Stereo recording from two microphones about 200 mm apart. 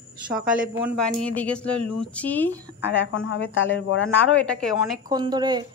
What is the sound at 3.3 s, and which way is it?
Speech, 70° left (ahead or behind).